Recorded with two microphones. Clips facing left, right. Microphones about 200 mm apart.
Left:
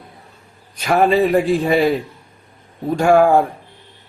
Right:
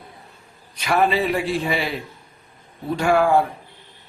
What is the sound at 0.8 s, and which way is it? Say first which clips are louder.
A man's voice: left 5 dB; 45° left (ahead or behind).